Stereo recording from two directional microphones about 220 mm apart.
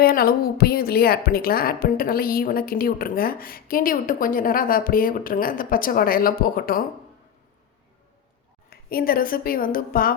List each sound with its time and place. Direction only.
0.0 s a woman's voice: 45° left (ahead or behind)
8.7 s a woman's voice: 45° left (ahead or behind)